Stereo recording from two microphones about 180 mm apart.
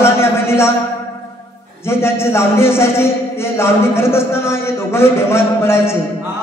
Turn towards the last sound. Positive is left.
turn(degrees=15)  # may be behind; listen again after turning